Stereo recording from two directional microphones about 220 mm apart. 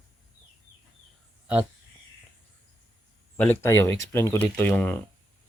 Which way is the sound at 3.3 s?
10° left (ahead or behind).